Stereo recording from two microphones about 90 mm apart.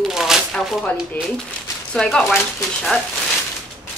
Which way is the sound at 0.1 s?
5° right (ahead or behind).